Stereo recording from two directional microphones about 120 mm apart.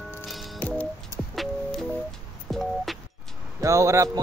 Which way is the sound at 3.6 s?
25° right (ahead or behind).